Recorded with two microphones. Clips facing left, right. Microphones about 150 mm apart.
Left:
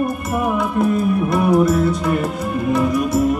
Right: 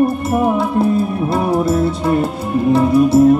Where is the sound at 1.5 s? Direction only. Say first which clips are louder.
Even; 30° right (ahead or behind).